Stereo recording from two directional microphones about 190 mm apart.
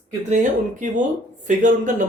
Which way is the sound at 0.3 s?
40° right (ahead or behind).